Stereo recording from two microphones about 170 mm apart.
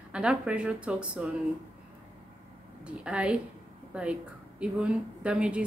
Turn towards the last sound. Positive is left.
turn(degrees=-5)  # may be behind; listen again after turning